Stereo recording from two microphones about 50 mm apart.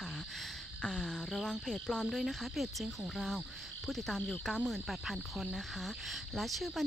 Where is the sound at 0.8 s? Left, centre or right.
Centre.